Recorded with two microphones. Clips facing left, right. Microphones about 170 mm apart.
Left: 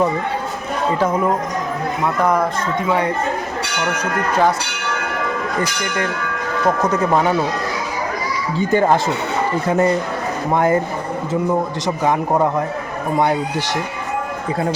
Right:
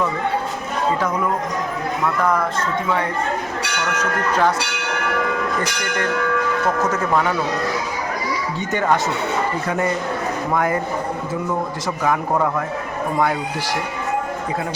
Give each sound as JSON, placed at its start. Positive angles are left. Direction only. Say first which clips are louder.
{"t": 0.9, "sound": "a man's voice", "louder": "left 4 dB", "side_deg": 25}
{"t": 3.9, "sound": "speech", "louder": "left 1 dB", "side_deg": 10}
{"t": 6.8, "sound": "a man's voice", "louder": "left 3 dB", "side_deg": 15}
{"t": 8.5, "sound": "a man's voice", "louder": "left 6 dB", "side_deg": 30}
{"t": 12.0, "sound": "a man's voice", "louder": "left 2 dB", "side_deg": 25}